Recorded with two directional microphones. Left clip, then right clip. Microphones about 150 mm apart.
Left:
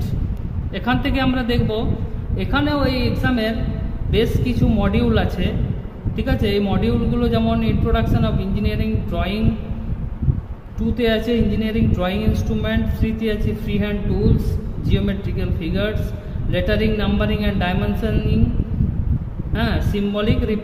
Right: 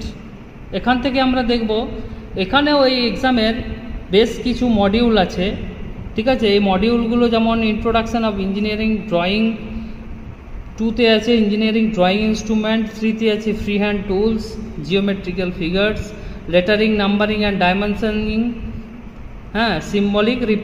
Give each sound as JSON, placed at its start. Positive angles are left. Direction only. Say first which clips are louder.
{"t": 0.7, "sound": "a man's voice", "louder": "right 4 dB", "side_deg": -65}
{"t": 2.3, "sound": "a man's voice", "louder": "right 6 dB", "side_deg": -55}
{"t": 11.2, "sound": "a man's voice", "louder": "right 5 dB", "side_deg": -60}
{"t": 19.5, "sound": "a man's voice", "louder": "right 5 dB", "side_deg": -60}